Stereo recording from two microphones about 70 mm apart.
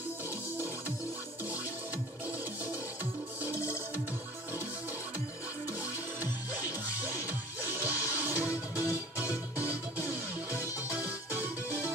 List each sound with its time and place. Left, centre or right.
7.1 s music: right